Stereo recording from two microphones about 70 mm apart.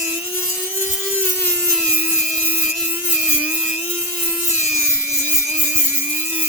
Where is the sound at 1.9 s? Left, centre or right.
Right.